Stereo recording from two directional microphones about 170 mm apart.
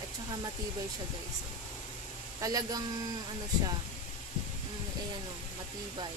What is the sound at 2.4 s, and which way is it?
Speech, 20° right (ahead or behind).